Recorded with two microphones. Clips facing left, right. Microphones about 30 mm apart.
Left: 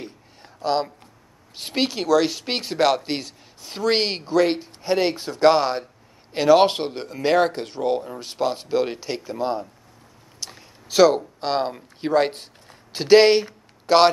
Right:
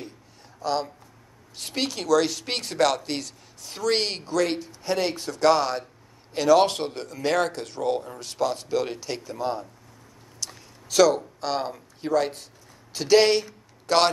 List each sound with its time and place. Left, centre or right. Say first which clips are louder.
0.6 s speech: left 4 dB; left
12.9 s speech: left 5 dB; left